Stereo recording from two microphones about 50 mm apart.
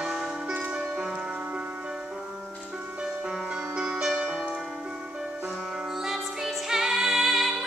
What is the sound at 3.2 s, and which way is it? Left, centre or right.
Music, centre.